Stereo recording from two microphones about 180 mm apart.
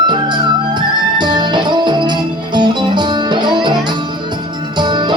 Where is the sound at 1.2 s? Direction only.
25° right (ahead or behind).